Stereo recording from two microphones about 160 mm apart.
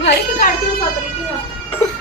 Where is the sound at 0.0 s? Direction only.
60° left (ahead or behind).